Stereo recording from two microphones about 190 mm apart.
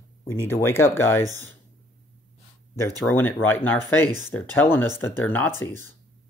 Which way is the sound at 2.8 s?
10° left (ahead or behind).